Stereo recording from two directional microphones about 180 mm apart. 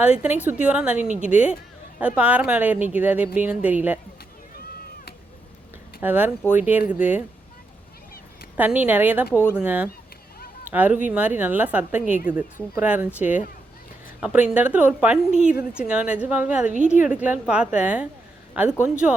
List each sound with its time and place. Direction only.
0.0 s a woman's voice: 10° right (ahead or behind)
6.0 s a woman's voice: 10° right (ahead or behind)
8.5 s a woman's voice: 10° right (ahead or behind)
9.3 s speech: 10° left (ahead or behind)
9.6 s a woman's voice: 10° right (ahead or behind)
16.7 s a woman's voice: 45° right (ahead or behind)
17.0 s a woman's voice: 45° left (ahead or behind)
17.2 s a woman's voice: 5° right (ahead or behind)